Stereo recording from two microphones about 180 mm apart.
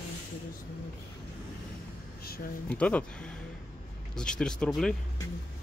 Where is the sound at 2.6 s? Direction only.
5° left (ahead or behind).